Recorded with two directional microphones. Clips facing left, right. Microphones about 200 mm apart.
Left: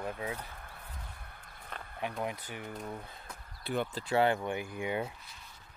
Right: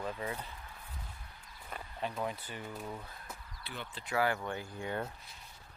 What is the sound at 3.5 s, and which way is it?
Speech, 40° left (ahead or behind).